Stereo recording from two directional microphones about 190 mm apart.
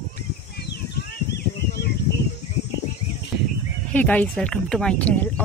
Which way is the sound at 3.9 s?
5° left (ahead or behind).